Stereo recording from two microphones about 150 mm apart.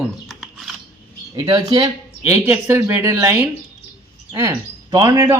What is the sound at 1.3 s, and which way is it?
Speech, 30° right (ahead or behind).